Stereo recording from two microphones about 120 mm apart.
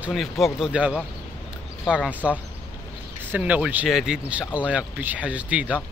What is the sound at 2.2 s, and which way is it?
Speech, 10° right (ahead or behind).